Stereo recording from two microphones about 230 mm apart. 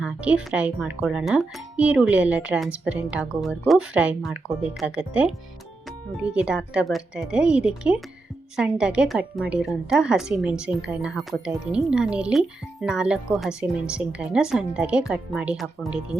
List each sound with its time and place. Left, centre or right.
0.0 s a woman's voice: centre